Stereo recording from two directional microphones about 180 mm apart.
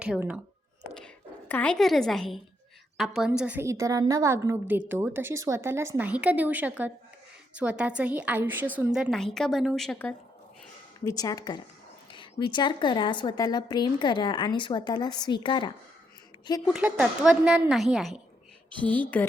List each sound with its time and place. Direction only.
0.0 s a woman's voice: 5° right (ahead or behind)
0.9 s a woman's voice: 5° left (ahead or behind)
11.0 s a woman's voice: 20° left (ahead or behind)
16.6 s a woman's voice: 5° right (ahead or behind)